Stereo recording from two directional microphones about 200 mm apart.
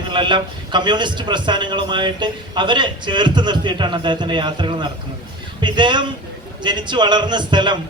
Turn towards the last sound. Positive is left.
turn(degrees=-25)  # may be behind; listen again after turning